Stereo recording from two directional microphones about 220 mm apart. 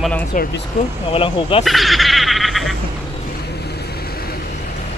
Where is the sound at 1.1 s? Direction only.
25° left (ahead or behind).